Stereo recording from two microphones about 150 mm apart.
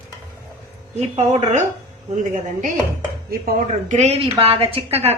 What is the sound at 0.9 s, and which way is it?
Speech, 45° right (ahead or behind).